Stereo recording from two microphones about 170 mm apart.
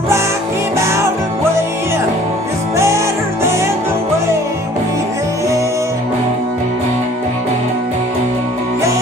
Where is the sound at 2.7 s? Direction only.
15° right (ahead or behind).